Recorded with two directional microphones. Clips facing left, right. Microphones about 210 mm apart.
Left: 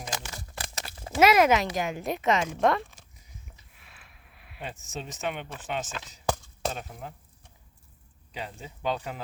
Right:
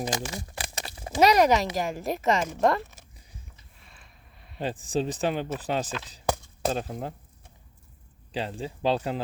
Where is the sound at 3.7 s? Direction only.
5° left (ahead or behind).